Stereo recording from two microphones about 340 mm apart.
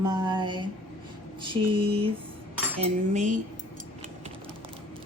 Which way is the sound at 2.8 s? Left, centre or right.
Right.